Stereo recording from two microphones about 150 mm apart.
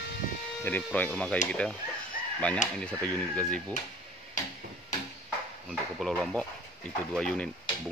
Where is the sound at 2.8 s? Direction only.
5° left (ahead or behind).